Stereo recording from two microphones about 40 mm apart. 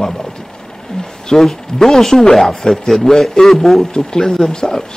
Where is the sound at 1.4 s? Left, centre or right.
Centre.